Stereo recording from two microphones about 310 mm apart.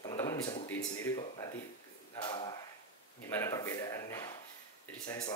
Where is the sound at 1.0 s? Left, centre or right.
Centre.